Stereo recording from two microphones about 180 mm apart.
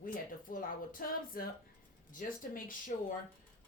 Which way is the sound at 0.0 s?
50° left (ahead or behind).